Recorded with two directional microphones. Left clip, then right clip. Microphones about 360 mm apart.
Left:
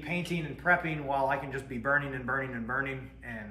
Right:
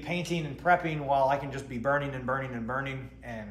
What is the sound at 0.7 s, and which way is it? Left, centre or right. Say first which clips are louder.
Speech: right 2 dB; centre.